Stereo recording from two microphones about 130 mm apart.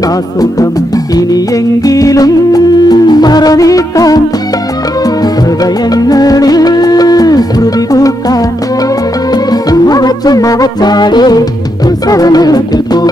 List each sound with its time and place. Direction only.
0.4 s music: 30° left (ahead or behind)